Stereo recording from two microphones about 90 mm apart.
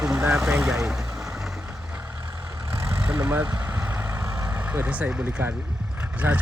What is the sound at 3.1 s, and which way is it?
Speech, 15° right (ahead or behind).